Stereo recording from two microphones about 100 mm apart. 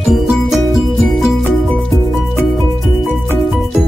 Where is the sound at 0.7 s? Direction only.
Centre (ahead or behind).